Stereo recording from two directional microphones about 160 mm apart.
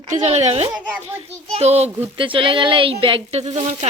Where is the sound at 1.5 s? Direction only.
40° right (ahead or behind).